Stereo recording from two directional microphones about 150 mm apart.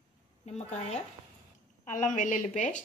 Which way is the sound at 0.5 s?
45° left (ahead or behind).